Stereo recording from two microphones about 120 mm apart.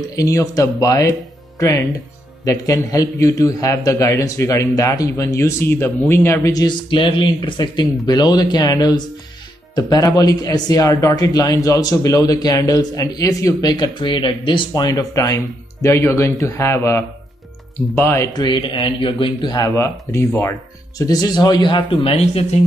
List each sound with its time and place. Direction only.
0.1 s speech: 30° left (ahead or behind)
6.9 s speech: 45° left (ahead or behind); by 18.3 s 20° left (ahead or behind)
18.3 s speech: 35° left (ahead or behind)
19.5 s speech: 30° left (ahead or behind)
21.0 s speech: 35° left (ahead or behind); by 22.6 s 60° left (ahead or behind)